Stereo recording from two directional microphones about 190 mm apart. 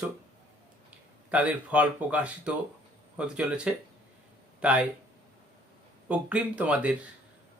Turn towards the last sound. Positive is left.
turn(degrees=-5)  # may be behind; listen again after turning